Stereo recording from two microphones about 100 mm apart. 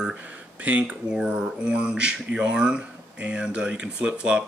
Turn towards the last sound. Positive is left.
turn(degrees=-10)  # may be behind; listen again after turning